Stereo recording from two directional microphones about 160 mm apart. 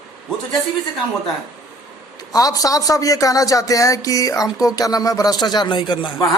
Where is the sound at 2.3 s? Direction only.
25° left (ahead or behind).